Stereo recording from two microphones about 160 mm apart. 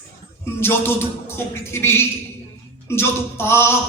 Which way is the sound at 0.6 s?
15° left (ahead or behind).